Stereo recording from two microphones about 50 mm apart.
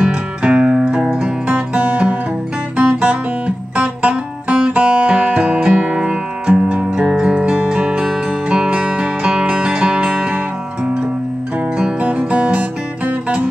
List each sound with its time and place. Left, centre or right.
0.0 s music: right
1.5 s music: right
12.0 s music: right